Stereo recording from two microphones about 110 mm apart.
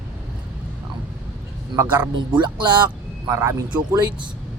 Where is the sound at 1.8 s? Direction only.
15° right (ahead or behind).